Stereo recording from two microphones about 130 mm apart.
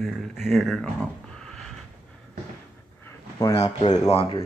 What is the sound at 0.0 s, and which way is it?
Speech, centre (ahead or behind).